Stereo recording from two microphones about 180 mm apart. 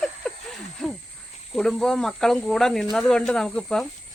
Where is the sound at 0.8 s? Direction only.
5° left (ahead or behind).